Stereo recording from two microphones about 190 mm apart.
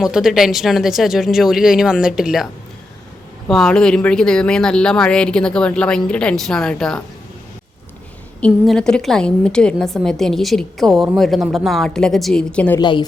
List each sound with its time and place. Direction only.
0.0 s a woman's voice: centre (ahead or behind)
3.5 s a woman's voice: 5° left (ahead or behind)
8.4 s a woman's voice: 5° left (ahead or behind)
12.8 s a woman's voice: 25° left (ahead or behind)